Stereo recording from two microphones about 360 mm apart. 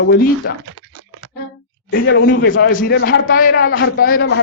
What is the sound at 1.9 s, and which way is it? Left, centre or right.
A man's voice, left.